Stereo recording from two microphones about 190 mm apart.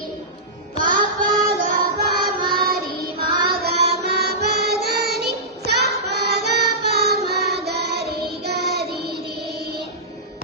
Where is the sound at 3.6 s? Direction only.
60° right (ahead or behind).